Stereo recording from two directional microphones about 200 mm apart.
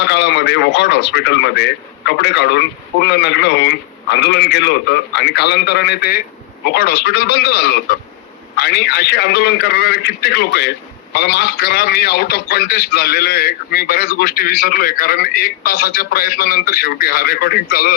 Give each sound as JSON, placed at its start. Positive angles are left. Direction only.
{"t": 0.0, "sound": "a man's voice", "side_deg": 60}